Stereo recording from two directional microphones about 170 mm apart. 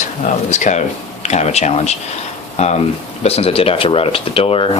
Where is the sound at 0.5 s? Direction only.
45° left (ahead or behind).